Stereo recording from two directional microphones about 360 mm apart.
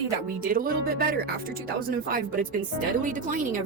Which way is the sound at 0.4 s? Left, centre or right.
Right.